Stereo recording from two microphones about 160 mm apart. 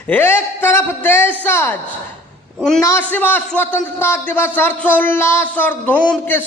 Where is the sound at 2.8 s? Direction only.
10° left (ahead or behind).